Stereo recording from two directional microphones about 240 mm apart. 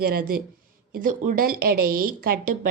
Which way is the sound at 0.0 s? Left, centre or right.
Right.